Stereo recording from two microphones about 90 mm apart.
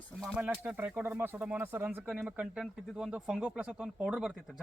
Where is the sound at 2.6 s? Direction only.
5° right (ahead or behind).